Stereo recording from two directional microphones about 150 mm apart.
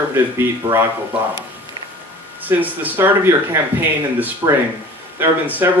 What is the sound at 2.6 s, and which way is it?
Speech, 10° right (ahead or behind).